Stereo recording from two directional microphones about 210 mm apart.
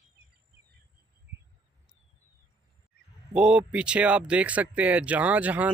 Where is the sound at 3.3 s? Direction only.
5° right (ahead or behind).